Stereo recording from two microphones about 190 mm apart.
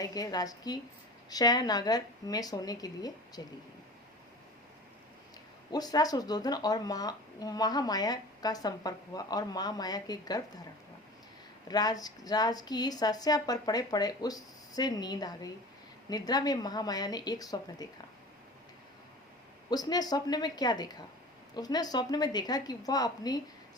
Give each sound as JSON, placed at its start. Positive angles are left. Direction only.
{"t": 0.0, "sound": "speech", "side_deg": 20}
{"t": 5.7, "sound": "speech", "side_deg": 20}
{"t": 11.7, "sound": "speech", "side_deg": 20}
{"t": 19.7, "sound": "speech", "side_deg": 20}